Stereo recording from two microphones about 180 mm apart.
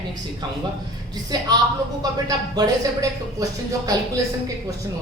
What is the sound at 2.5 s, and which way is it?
A woman's voice, 20° right (ahead or behind).